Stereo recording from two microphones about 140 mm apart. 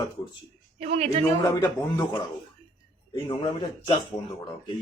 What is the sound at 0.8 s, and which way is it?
Speech, 45° right (ahead or behind).